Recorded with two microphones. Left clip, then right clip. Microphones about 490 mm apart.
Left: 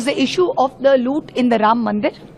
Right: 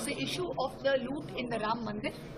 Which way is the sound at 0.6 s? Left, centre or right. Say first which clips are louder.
Left 15 dB; left.